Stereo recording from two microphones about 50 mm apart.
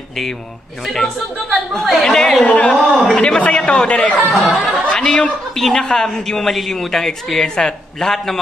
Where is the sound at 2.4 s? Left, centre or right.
Left.